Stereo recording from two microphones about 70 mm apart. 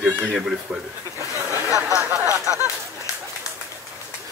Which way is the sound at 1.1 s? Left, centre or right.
Right.